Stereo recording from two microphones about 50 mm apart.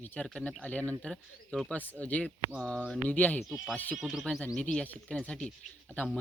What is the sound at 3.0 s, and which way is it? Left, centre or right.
Speech, left.